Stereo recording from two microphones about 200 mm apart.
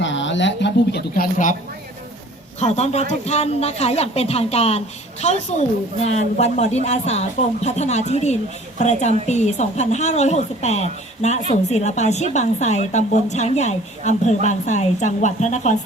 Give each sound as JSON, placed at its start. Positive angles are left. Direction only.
{"t": 0.0, "sound": "a woman's voice", "side_deg": 65}
{"t": 2.6, "sound": "a woman's voice", "side_deg": 35}